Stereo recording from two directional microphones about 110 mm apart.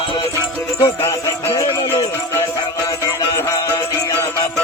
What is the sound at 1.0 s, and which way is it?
Music, 25° left (ahead or behind).